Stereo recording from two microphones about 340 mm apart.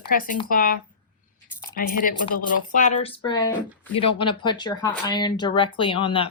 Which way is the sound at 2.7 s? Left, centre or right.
Left.